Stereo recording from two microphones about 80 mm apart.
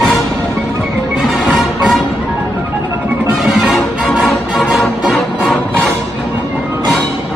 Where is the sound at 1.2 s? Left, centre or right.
Centre.